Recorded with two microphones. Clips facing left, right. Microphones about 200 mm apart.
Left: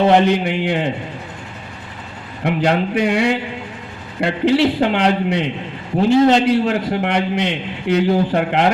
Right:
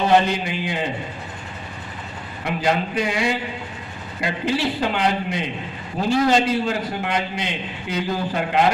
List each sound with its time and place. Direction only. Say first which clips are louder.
0.3 s a man's voice: left 7 dB; 65° left (ahead or behind)
2.4 s a man's voice: left 5 dB; 65° left (ahead or behind)
6.1 s a man's voice: left 7 dB; 20° left (ahead or behind)
6.3 s a man's voice: left 5 dB; 70° left (ahead or behind)